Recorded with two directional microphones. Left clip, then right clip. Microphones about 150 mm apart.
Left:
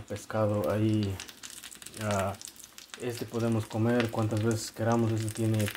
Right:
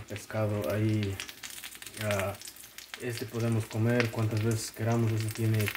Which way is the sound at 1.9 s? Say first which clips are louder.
Left 1 dB; 15° left (ahead or behind).